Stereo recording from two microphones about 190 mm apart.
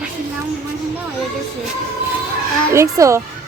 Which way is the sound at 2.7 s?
15° right (ahead or behind).